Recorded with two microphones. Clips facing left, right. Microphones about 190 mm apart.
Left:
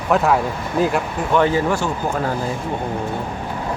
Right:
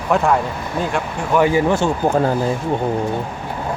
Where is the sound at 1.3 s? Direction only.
10° right (ahead or behind).